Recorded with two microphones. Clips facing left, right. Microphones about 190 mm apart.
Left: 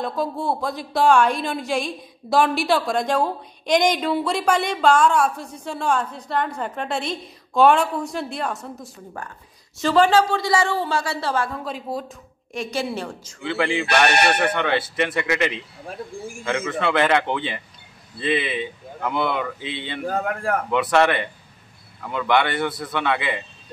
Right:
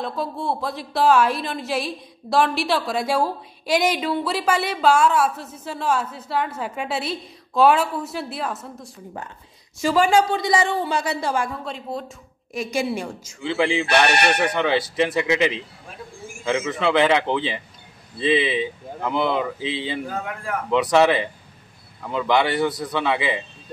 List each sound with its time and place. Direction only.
0.0 s a woman's voice: centre (ahead or behind)
9.8 s a woman's voice: 10° right (ahead or behind)
11.6 s a woman's voice: centre (ahead or behind)
12.5 s a woman's voice: 10° right (ahead or behind)
18.2 s speech: 90° right
19.6 s speech: 90° right
20.1 s a man's voice: 45° left (ahead or behind)
20.7 s a woman's voice: 5° right (ahead or behind)